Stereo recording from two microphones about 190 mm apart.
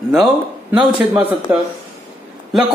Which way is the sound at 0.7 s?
10° right (ahead or behind).